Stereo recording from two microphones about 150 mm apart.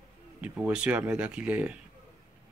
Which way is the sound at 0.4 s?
10° right (ahead or behind).